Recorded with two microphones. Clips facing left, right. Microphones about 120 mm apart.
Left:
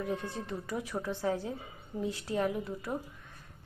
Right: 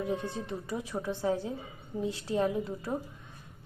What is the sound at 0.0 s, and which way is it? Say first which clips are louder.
A woman's voice: right 2 dB; 20° right (ahead or behind).